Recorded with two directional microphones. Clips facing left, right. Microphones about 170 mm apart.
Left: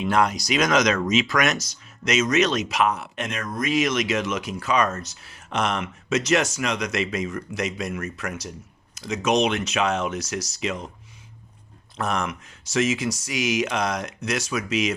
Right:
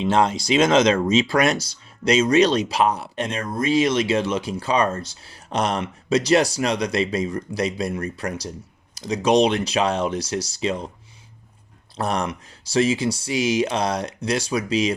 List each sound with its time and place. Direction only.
0.0 s speech: 25° right (ahead or behind)
11.9 s speech: 35° right (ahead or behind)